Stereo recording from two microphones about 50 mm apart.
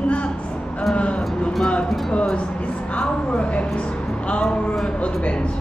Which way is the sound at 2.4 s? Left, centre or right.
Left.